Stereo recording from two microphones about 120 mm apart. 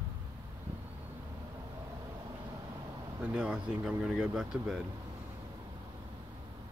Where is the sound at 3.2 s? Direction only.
10° right (ahead or behind).